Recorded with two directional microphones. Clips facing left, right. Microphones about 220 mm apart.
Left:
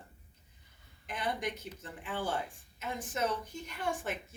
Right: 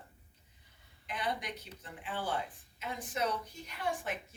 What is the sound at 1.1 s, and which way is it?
A woman's voice, 45° left (ahead or behind).